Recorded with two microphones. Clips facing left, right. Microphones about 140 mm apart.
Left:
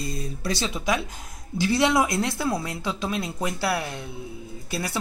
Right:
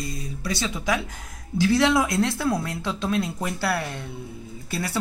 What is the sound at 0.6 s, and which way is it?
A man's voice, 20° left (ahead or behind).